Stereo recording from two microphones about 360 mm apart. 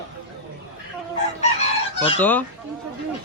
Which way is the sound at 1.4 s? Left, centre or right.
Centre.